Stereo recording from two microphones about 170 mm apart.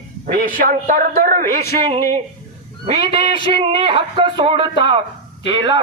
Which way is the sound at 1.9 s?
40° right (ahead or behind).